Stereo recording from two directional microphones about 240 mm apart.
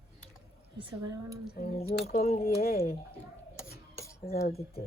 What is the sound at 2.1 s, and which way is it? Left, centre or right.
Speech, left.